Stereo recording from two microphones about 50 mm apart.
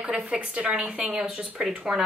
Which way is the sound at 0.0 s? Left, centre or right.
Right.